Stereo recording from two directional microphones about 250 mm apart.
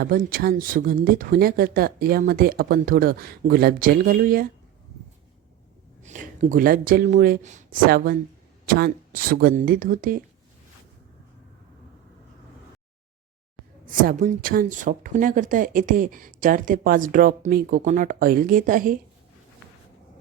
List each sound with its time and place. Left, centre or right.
0.0 s a woman's voice: right
6.0 s a woman's voice: right
13.8 s a woman's voice: right